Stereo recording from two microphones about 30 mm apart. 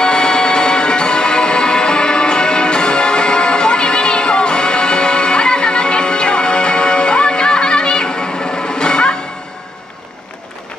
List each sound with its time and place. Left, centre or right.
0.0 s music: left